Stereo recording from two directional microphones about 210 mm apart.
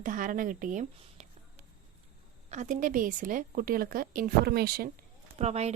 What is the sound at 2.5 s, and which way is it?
A woman's voice, 35° right (ahead or behind).